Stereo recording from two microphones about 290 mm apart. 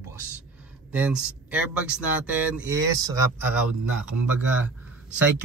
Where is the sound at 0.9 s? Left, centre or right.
Centre.